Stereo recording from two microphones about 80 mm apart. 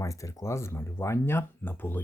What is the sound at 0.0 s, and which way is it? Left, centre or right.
Speech, left.